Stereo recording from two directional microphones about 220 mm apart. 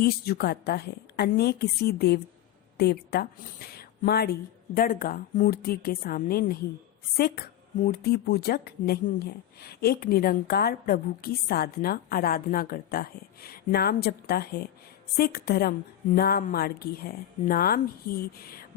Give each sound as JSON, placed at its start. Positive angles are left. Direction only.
{"t": 0.0, "sound": "speech", "side_deg": 45}